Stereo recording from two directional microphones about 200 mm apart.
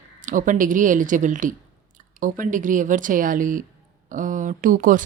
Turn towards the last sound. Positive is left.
turn(degrees=-45)  # may be behind; listen again after turning